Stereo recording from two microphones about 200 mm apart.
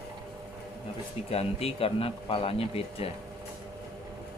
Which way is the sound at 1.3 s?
30° left (ahead or behind).